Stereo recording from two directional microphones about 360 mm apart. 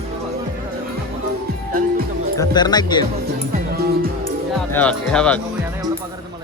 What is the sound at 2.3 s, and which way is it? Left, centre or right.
Speech, centre.